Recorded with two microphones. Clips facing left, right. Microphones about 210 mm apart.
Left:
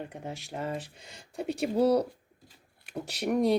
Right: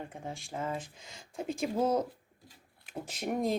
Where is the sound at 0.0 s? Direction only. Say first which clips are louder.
Left 3 dB; 75° left (ahead or behind).